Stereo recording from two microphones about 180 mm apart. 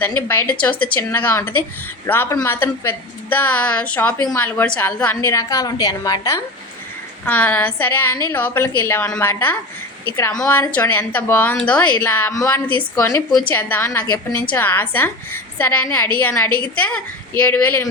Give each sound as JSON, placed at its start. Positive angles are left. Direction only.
{"t": 0.0, "sound": "a woman's voice", "side_deg": 10}